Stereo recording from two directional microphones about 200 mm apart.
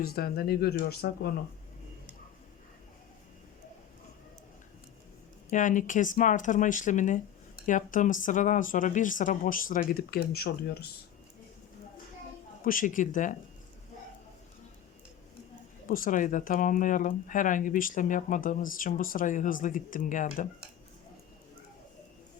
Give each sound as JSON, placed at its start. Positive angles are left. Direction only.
{"t": 0.0, "sound": "speech", "side_deg": 50}
{"t": 5.5, "sound": "speech", "side_deg": 40}
{"t": 12.6, "sound": "speech", "side_deg": 40}
{"t": 15.9, "sound": "speech", "side_deg": 40}